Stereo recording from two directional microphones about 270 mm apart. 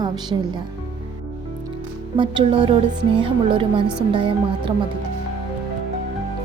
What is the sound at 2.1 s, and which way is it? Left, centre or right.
A woman's voice, centre.